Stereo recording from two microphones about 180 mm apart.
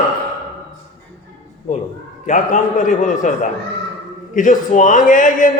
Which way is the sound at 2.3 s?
45° left (ahead or behind).